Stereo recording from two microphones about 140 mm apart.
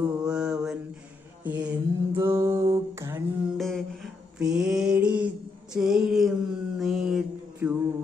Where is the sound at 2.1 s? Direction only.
20° right (ahead or behind).